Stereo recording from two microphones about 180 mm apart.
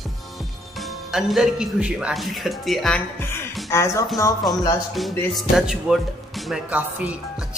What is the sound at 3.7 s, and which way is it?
Speech, 15° left (ahead or behind).